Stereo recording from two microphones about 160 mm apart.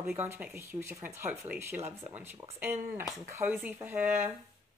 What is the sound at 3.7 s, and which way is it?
Speech, 15° right (ahead or behind).